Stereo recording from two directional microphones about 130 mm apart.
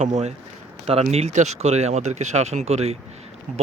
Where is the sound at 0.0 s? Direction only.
60° right (ahead or behind).